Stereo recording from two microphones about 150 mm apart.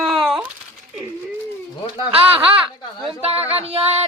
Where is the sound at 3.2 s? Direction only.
45° right (ahead or behind).